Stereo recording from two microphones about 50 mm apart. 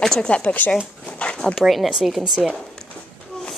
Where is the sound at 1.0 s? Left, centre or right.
Left.